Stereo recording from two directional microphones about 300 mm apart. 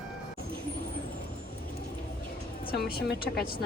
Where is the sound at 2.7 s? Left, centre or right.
Left.